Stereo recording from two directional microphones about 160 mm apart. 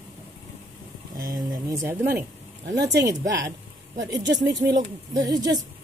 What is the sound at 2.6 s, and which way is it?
Speech, 90° right.